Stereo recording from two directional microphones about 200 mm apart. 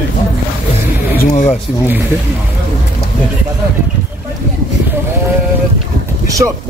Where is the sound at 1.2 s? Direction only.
35° left (ahead or behind).